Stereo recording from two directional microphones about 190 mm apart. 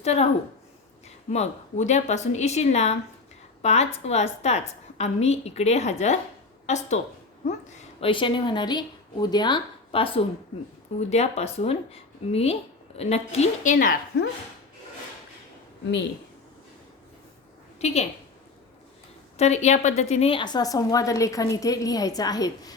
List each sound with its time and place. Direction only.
0.0 s a woman's voice: 35° left (ahead or behind)
1.3 s a woman's voice: 35° left (ahead or behind)
8.1 s a woman's voice: 25° left (ahead or behind); by 14.3 s 45° left (ahead or behind)
17.7 s a woman's voice: 35° left (ahead or behind)
19.4 s a woman's voice: 35° left (ahead or behind); by 22.7 s 20° left (ahead or behind)